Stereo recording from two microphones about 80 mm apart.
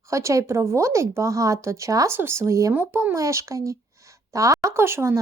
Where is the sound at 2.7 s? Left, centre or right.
Right.